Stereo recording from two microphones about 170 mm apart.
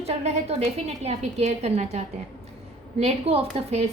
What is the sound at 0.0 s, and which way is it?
A woman's voice, 35° right (ahead or behind).